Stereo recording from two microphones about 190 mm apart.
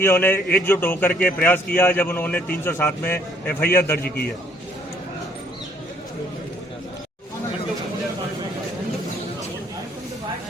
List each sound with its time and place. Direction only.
0.0 s a man's voice: 10° left (ahead or behind)
4.0 s a man's voice: 55° left (ahead or behind)